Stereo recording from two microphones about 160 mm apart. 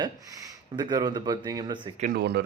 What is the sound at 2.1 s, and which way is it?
Speech, 90° right.